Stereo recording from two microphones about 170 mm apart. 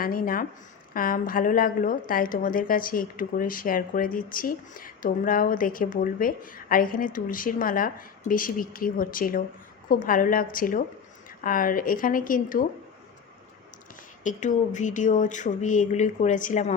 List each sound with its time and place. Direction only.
0.0 s a woman's voice: 55° left (ahead or behind)
14.3 s speech: 45° left (ahead or behind)